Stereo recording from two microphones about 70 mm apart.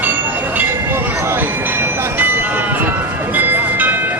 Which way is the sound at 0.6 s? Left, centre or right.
Right.